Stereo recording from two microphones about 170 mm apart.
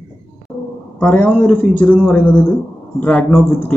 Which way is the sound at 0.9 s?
10° left (ahead or behind).